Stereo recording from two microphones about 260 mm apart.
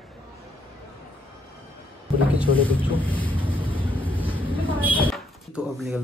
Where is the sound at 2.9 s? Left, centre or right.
Centre.